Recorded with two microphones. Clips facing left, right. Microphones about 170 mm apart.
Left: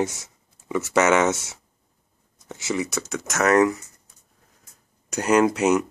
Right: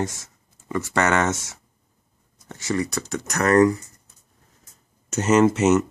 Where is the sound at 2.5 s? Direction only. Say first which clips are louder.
Right 1 dB; 5° left (ahead or behind).